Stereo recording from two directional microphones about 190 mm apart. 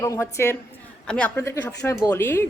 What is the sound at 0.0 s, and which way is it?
Speech, 15° left (ahead or behind).